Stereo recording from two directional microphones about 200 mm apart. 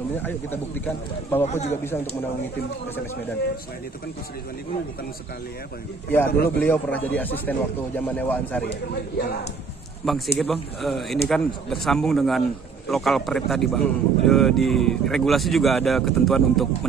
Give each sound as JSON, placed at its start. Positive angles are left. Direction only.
{"t": 0.2, "sound": "speech", "side_deg": 10}
{"t": 1.4, "sound": "speech", "side_deg": 30}
{"t": 6.5, "sound": "speech", "side_deg": 10}
{"t": 8.6, "sound": "a man's voice", "side_deg": 55}
{"t": 10.0, "sound": "a man's voice", "side_deg": 0}